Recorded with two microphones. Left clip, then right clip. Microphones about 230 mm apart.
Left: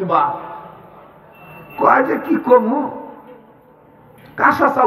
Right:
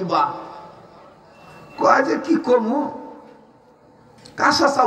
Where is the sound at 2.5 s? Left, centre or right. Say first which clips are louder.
Left 7 dB; right.